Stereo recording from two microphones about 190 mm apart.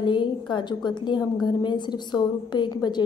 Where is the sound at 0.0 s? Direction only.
25° left (ahead or behind).